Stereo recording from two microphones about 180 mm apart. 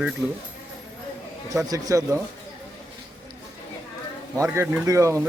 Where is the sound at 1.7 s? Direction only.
20° right (ahead or behind).